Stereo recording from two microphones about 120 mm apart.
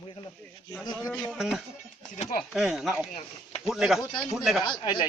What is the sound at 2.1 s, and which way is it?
Speech, 75° left (ahead or behind).